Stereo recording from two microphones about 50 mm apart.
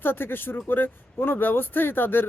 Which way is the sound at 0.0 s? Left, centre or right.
Left.